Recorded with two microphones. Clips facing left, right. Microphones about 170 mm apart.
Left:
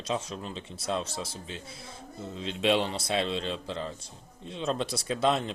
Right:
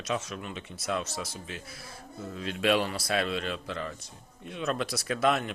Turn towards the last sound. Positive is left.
turn(degrees=30)  # may be behind; listen again after turning